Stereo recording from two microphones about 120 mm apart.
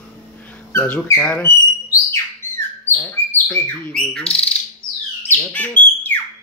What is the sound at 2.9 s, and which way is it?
Speech, 15° left (ahead or behind).